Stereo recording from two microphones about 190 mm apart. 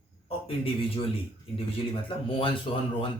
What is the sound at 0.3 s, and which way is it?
A man's voice, 30° left (ahead or behind).